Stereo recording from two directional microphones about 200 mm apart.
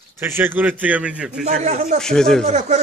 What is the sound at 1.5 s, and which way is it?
Speech, 35° right (ahead or behind).